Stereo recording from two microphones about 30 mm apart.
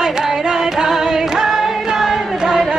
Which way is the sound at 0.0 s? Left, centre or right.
Centre.